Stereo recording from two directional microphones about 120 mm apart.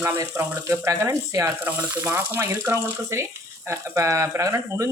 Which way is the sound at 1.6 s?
15° right (ahead or behind).